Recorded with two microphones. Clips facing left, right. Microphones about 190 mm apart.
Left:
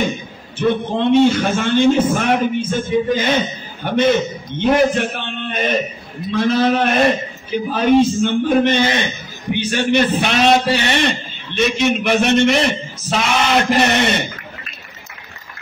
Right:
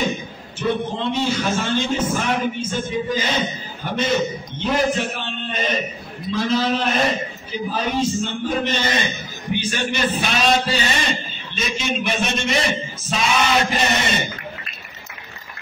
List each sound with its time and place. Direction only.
0.6 s a man's voice: 55° left (ahead or behind)